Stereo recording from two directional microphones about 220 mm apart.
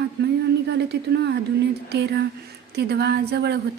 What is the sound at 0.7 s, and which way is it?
Speech, 50° right (ahead or behind).